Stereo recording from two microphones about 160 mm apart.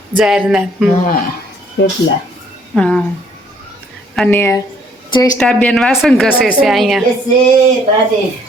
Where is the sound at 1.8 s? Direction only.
90° left.